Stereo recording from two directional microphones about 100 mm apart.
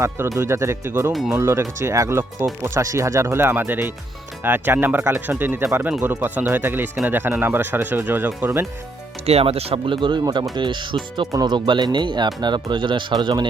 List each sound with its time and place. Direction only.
0.3 s speech: 30° right (ahead or behind)
1.1 s speech: centre (ahead or behind)
1.4 s speech: 25° right (ahead or behind)
9.2 s speech: 80° right; by 13.5 s 50° right (ahead or behind)